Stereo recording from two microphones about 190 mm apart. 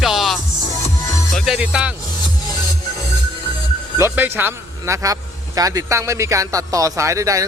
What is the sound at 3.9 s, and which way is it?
Speech, 10° right (ahead or behind).